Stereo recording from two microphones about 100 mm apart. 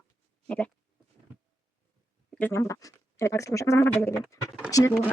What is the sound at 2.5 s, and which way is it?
Speech, 30° left (ahead or behind).